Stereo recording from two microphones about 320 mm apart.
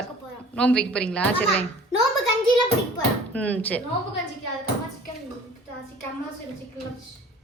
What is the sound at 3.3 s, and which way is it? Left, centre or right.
Speech, centre.